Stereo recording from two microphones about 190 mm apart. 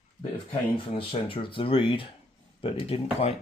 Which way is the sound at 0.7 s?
30° left (ahead or behind).